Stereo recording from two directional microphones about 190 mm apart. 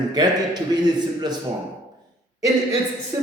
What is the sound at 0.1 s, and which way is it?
Speech, 20° right (ahead or behind).